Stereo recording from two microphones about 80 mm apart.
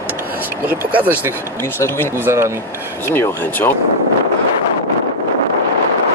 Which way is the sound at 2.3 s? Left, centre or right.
Right.